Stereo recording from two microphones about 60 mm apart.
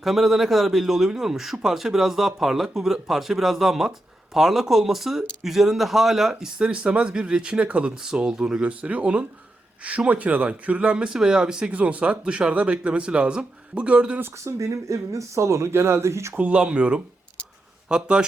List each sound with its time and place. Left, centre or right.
0.0 s a man's voice: centre
14.4 s speech: right
16.4 s speech: right